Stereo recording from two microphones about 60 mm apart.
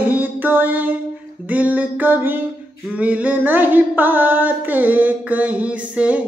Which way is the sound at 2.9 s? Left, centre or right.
Right.